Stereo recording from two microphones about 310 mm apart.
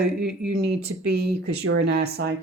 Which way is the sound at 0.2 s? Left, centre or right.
Centre.